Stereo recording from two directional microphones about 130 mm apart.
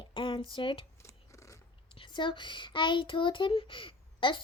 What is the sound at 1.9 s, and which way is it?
A child's voice, 40° left (ahead or behind).